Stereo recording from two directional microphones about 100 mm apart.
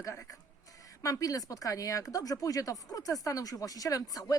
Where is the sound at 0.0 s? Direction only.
30° left (ahead or behind).